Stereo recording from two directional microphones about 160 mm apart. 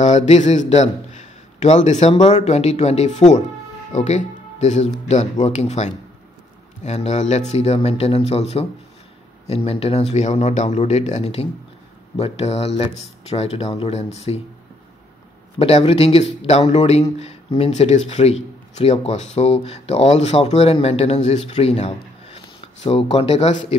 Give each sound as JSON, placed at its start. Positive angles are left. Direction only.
{"t": 0.0, "sound": "a man's voice", "side_deg": 50}
{"t": 15.6, "sound": "speech", "side_deg": 40}